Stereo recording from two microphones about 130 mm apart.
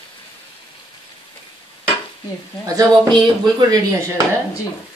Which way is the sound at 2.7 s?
30° right (ahead or behind).